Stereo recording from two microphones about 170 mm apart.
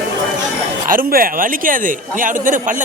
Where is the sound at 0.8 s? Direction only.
55° right (ahead or behind).